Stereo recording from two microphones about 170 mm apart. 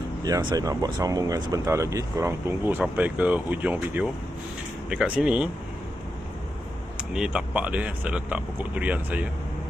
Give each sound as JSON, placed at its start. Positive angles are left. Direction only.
{"t": 0.3, "sound": "speech", "side_deg": -20}
{"t": 7.1, "sound": "speech", "side_deg": -5}